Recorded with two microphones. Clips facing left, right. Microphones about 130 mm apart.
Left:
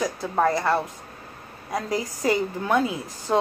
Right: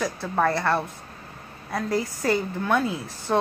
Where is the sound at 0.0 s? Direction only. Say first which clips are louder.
Left 1 dB; 15° left (ahead or behind).